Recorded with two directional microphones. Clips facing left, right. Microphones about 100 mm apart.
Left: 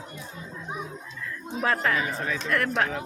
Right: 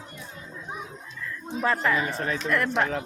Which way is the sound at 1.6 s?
Centre (ahead or behind).